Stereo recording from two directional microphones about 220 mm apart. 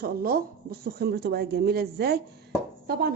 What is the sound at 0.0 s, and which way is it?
A woman's voice, 40° right (ahead or behind).